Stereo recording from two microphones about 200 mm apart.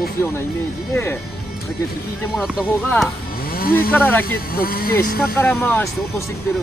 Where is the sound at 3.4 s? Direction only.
50° left (ahead or behind).